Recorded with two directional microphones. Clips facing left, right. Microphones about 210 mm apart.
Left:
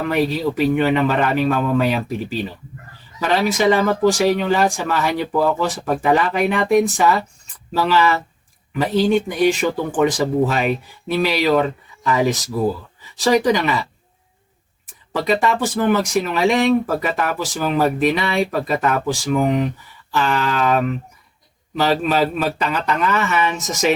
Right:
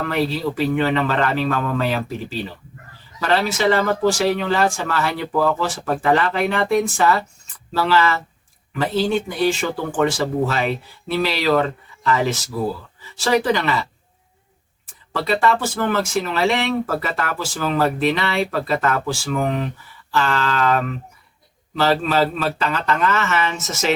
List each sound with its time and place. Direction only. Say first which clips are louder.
0.0 s speech: left 2 dB; 15° left (ahead or behind)
15.1 s speech: left 1 dB; 15° left (ahead or behind)